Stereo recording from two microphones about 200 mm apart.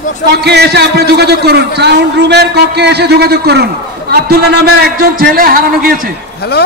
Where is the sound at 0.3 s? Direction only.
55° right (ahead or behind).